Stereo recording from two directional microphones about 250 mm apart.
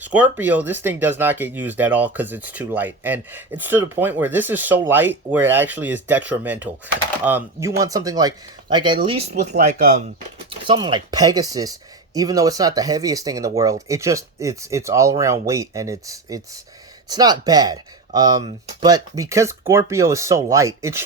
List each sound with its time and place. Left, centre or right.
0.0 s speech: centre
9.3 s speech: right; by 21.0 s centre